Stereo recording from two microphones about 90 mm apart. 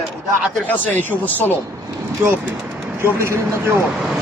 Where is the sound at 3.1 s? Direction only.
25° right (ahead or behind).